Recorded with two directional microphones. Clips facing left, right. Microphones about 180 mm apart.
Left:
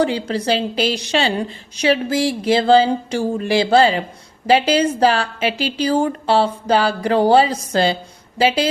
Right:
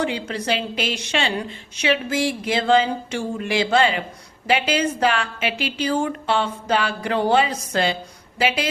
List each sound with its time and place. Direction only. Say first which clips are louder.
0.0 s a woman's voice: left 6 dB; 35° left (ahead or behind)